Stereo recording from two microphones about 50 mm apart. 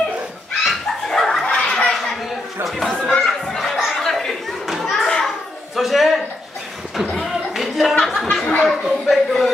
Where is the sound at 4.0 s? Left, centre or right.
Centre.